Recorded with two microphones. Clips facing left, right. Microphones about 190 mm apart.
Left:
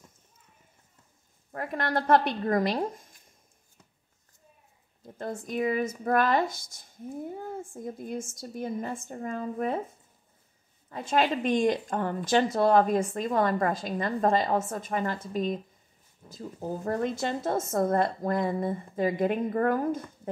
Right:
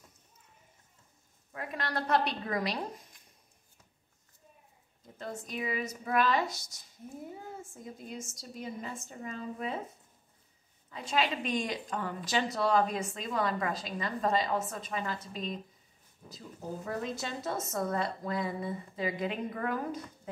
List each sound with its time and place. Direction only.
1.5 s a woman's voice: 50° left (ahead or behind)
5.1 s a woman's voice: 50° left (ahead or behind)
10.9 s a woman's voice: 50° left (ahead or behind)